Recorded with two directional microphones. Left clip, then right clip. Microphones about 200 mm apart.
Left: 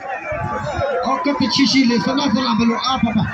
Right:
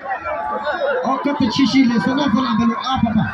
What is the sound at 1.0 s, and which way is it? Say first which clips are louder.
Music: left 1 dB; 50° right (ahead or behind).